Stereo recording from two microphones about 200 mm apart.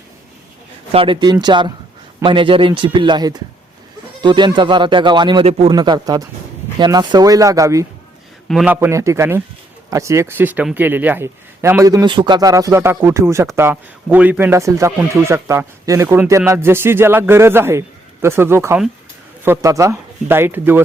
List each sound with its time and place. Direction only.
0.9 s speech: 25° right (ahead or behind)
8.4 s speech: 5° right (ahead or behind)